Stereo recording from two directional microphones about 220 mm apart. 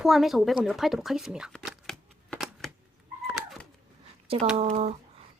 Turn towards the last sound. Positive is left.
turn(degrees=-30)  # may be behind; listen again after turning